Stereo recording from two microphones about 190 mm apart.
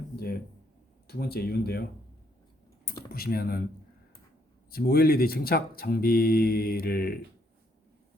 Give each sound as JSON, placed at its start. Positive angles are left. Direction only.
{"t": 1.0, "sound": "speech", "side_deg": 55}
{"t": 3.1, "sound": "speech", "side_deg": 55}
{"t": 4.7, "sound": "speech", "side_deg": 55}